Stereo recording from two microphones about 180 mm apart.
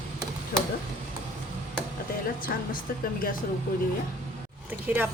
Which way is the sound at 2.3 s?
50° left (ahead or behind).